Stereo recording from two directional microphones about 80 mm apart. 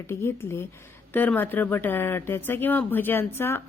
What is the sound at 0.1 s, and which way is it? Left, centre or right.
Speech, left.